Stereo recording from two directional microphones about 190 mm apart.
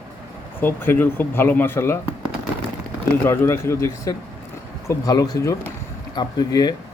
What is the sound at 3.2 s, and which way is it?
Speech, 15° left (ahead or behind).